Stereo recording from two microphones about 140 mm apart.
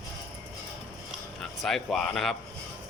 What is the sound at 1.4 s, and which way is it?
Speech, centre (ahead or behind).